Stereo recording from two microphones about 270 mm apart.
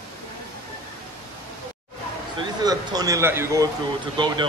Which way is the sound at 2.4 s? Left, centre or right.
Centre.